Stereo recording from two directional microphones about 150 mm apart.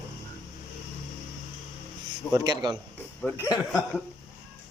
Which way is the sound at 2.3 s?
25° right (ahead or behind).